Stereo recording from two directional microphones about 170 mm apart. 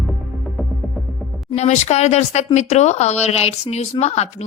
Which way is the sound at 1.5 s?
40° left (ahead or behind).